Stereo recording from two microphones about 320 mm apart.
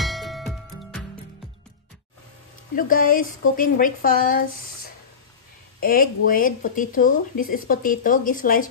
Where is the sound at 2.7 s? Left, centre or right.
Left.